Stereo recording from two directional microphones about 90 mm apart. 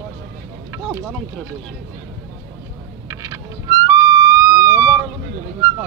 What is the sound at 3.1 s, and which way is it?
Music, 35° right (ahead or behind).